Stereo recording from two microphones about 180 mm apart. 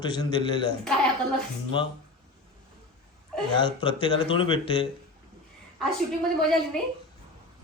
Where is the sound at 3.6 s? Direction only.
30° left (ahead or behind).